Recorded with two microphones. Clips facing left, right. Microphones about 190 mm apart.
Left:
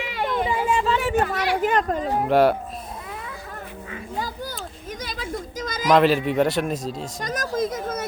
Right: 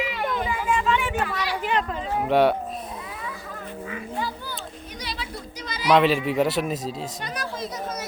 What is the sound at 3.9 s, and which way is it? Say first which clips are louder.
Children playing: even; 40° left (ahead or behind).